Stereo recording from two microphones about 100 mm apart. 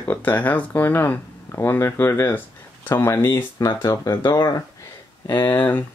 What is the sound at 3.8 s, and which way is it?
Speech, 40° left (ahead or behind).